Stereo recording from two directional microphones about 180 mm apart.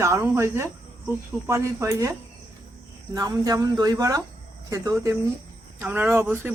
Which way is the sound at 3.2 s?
20° right (ahead or behind).